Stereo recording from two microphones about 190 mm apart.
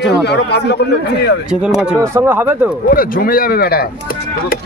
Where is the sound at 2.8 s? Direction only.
50° left (ahead or behind).